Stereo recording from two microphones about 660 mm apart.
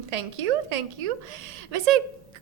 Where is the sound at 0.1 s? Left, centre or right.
Right.